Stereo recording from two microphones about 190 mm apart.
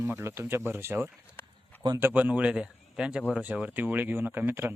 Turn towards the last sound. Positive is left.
turn(degrees=-10)  # may be behind; listen again after turning